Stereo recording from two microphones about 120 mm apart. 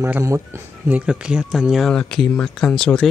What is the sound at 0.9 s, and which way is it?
Speech, 10° right (ahead or behind).